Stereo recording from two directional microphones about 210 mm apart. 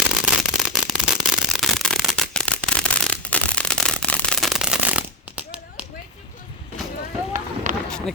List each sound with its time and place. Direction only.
0.0 s a sound: 5° right (ahead or behind)
7.3 s run: 35° right (ahead or behind)
7.9 s run: 5° left (ahead or behind)